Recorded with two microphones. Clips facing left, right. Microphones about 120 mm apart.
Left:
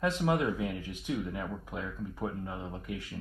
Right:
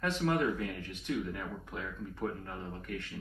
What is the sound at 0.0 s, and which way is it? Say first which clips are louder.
Speech: left 2 dB; 10° left (ahead or behind).